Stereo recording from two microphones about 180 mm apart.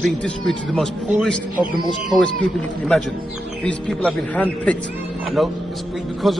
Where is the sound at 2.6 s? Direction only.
5° left (ahead or behind).